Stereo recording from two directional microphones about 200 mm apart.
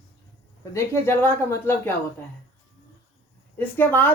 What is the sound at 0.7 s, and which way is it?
A woman's voice, 15° left (ahead or behind).